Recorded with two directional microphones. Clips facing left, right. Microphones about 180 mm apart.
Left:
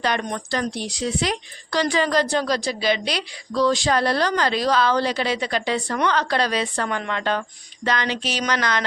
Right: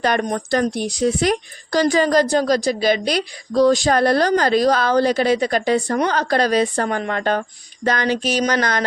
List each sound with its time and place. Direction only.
0.0 s speech: 45° right (ahead or behind)